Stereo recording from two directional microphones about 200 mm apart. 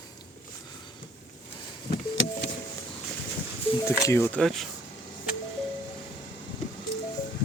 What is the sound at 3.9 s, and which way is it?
Speech, 10° left (ahead or behind).